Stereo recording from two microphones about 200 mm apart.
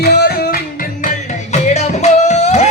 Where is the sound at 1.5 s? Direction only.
35° left (ahead or behind).